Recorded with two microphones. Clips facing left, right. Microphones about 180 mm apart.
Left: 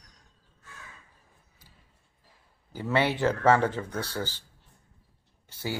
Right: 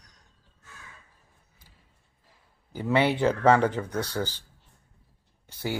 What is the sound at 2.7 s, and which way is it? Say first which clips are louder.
Speech: right 3 dB; 15° right (ahead or behind).